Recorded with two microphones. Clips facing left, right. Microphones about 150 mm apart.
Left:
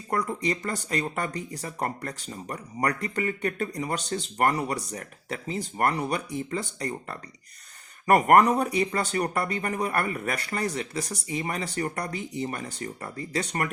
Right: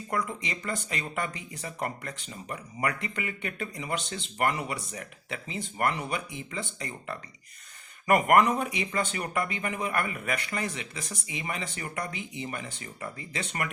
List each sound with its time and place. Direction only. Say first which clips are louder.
0.1 s speech: left 5 dB; 40° left (ahead or behind)